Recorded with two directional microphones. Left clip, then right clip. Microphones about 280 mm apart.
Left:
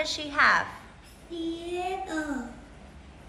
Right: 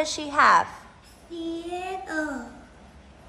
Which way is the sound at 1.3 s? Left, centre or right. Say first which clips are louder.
Right 1 dB; centre.